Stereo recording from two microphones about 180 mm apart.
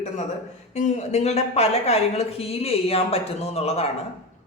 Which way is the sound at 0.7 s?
40° left (ahead or behind).